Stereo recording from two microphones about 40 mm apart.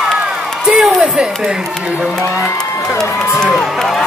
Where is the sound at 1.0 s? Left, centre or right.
Centre.